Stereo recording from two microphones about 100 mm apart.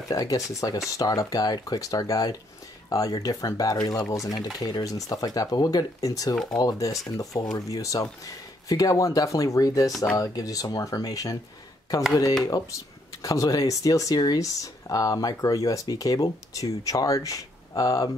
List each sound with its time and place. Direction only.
0.1 s speech: 35° left (ahead or behind)
6.3 s speech: 5° left (ahead or behind)
6.6 s speech: 35° left (ahead or behind)
12.4 s speech: 35° left (ahead or behind)